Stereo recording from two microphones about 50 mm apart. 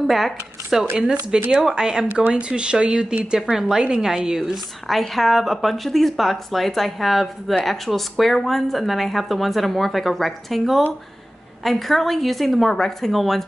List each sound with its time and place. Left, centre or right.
0.0 s speech: centre
0.9 s a woman's voice: centre
2.1 s a woman's voice: right
4.4 s speech: centre